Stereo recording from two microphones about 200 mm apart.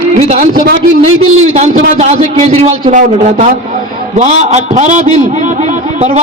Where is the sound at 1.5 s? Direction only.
35° right (ahead or behind).